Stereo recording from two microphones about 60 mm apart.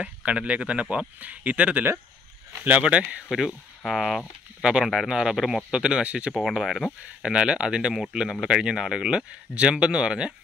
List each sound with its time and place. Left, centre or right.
0.0 s speech: right
3.3 s speech: centre
6.3 s speech: centre
7.2 s speech: centre